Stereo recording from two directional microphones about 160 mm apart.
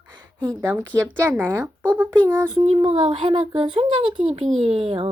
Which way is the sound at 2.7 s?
35° right (ahead or behind).